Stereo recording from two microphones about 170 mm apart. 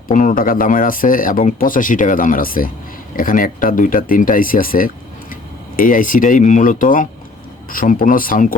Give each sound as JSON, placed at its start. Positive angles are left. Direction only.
{"t": 0.1, "sound": "speech", "side_deg": 50}